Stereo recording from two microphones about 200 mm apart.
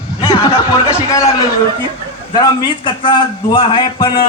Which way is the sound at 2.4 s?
20° left (ahead or behind).